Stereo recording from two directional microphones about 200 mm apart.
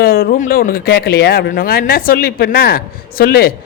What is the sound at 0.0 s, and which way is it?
Speech, 50° left (ahead or behind).